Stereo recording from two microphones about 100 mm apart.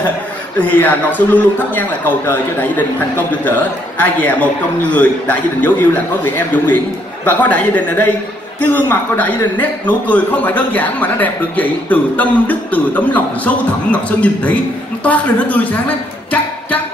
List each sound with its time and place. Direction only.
0.6 s a man's voice: 15° left (ahead or behind)